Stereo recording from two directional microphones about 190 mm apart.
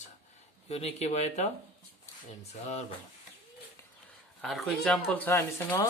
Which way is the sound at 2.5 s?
35° left (ahead or behind).